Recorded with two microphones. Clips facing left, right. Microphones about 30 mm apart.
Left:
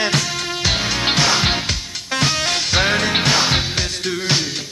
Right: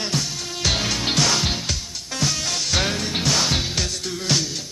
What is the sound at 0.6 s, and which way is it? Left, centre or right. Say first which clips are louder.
Music: left 2 dB; centre.